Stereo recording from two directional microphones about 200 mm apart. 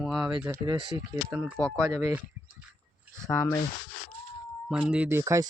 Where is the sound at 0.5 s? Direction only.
20° right (ahead or behind).